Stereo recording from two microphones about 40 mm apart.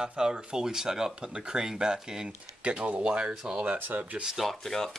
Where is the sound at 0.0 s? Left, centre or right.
Centre.